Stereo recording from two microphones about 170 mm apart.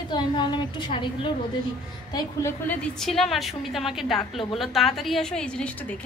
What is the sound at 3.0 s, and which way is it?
A woman's voice, centre (ahead or behind).